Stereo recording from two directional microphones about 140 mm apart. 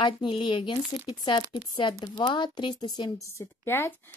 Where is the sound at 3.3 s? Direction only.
15° left (ahead or behind).